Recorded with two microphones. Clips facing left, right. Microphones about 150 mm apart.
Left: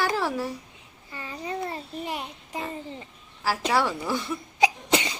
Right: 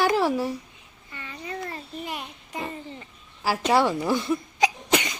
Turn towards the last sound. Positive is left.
turn(degrees=30)  # may be behind; listen again after turning